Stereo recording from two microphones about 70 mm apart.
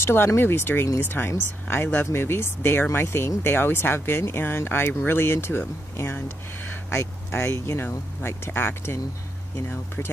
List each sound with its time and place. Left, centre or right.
0.0 s speech: left